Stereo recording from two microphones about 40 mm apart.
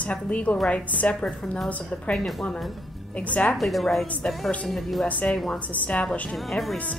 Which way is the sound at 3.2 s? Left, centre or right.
Left.